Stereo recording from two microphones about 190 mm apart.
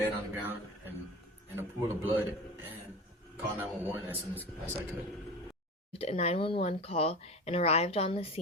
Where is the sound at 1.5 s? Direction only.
10° right (ahead or behind).